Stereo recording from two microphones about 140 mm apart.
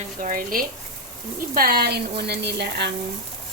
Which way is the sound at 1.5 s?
90° right.